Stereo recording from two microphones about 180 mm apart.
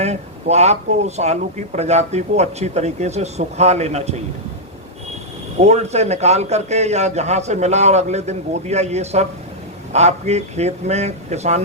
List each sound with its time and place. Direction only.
0.0 s speech: 40° right (ahead or behind)
5.5 s speech: 35° right (ahead or behind)